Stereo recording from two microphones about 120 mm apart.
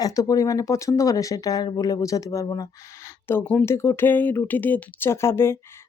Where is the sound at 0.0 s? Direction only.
30° left (ahead or behind).